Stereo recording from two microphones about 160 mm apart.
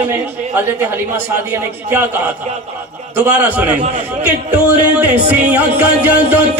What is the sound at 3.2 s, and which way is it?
Speech, 10° right (ahead or behind).